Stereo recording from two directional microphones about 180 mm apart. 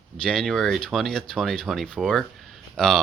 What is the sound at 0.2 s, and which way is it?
Speech, 5° left (ahead or behind).